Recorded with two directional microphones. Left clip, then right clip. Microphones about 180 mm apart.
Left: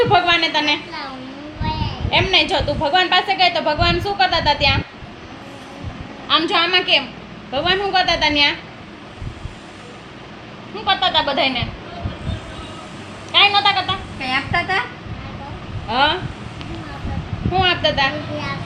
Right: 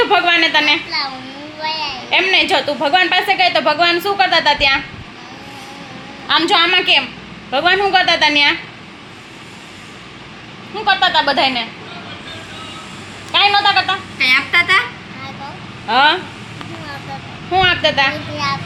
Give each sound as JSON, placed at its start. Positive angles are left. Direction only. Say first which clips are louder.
{"t": 0.1, "sound": "a sound", "louder": "right 3 dB", "side_deg": -40}
{"t": 2.0, "sound": "a woman's voice", "louder": "right 3 dB", "side_deg": -40}
{"t": 6.2, "sound": "a woman's voice", "louder": "right 4 dB", "side_deg": -30}
{"t": 10.8, "sound": "a woman's voice", "louder": "right 4 dB", "side_deg": -35}
{"t": 13.3, "sound": "a woman's voice", "louder": "right 2 dB", "side_deg": -35}
{"t": 14.2, "sound": "speech", "louder": "right 9 dB", "side_deg": 20}
{"t": 15.9, "sound": "a woman's voice", "louder": "right 5 dB", "side_deg": -35}
{"t": 17.5, "sound": "a woman's voice", "louder": "right 4 dB", "side_deg": -35}